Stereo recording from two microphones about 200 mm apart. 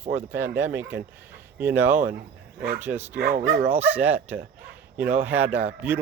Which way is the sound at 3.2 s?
45° right (ahead or behind).